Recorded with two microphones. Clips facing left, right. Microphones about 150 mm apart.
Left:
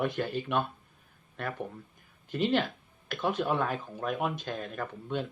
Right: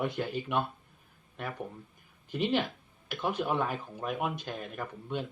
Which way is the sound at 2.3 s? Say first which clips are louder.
Left 2 dB; 10° right (ahead or behind).